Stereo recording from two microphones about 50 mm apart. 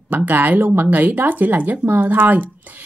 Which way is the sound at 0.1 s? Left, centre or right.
Right.